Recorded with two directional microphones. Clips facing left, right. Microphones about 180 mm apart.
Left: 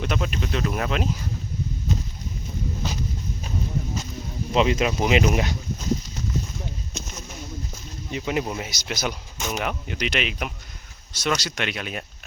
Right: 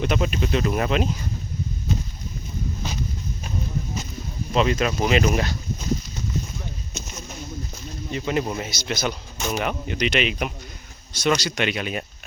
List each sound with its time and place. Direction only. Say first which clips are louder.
0.0 s speech: right 4 dB; centre (ahead or behind)
4.5 s speech: even; 20° left (ahead or behind)
8.1 s speech: right 1 dB; 10° left (ahead or behind)